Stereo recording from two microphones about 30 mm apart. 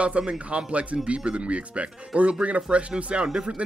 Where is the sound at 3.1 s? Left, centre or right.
Right.